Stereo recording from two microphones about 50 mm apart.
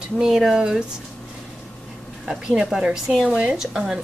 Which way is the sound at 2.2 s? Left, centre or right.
Centre.